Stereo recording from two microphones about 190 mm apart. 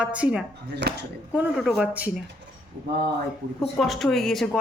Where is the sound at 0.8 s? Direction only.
65° right (ahead or behind).